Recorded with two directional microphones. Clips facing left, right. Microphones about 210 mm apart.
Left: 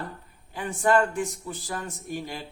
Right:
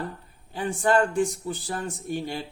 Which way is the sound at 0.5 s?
30° right (ahead or behind).